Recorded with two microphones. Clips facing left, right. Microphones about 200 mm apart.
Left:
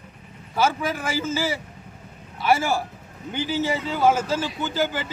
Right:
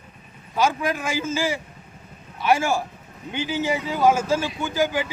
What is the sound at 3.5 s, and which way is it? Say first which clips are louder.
A man's voice: even; 15° right (ahead or behind).